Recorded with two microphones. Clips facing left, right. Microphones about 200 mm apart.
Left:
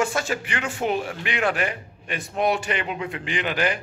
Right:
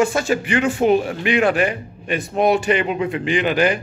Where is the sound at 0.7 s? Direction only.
40° right (ahead or behind).